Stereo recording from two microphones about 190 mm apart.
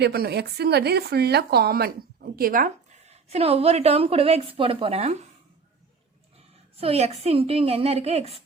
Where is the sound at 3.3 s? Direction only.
30° right (ahead or behind).